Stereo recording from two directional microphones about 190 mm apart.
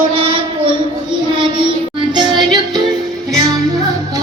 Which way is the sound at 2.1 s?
25° right (ahead or behind).